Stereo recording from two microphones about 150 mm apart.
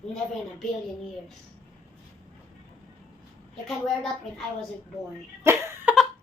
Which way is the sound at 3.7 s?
Centre (ahead or behind).